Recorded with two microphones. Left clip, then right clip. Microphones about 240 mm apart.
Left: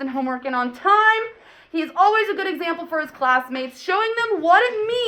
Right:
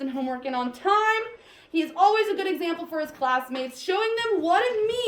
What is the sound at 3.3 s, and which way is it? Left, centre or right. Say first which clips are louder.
A woman's voice: left 5 dB; centre.